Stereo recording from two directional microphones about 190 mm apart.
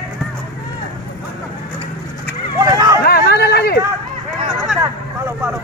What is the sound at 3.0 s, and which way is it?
Hubbub, 55° left (ahead or behind).